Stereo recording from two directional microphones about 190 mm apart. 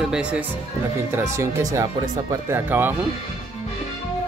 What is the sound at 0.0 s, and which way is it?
Speech, 5° right (ahead or behind).